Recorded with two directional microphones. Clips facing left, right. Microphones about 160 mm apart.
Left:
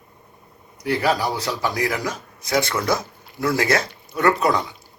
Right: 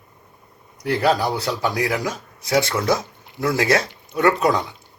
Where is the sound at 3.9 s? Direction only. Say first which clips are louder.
Right 1 dB; 20° right (ahead or behind).